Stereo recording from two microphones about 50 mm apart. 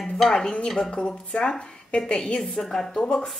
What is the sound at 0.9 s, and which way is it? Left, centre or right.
Speech, centre.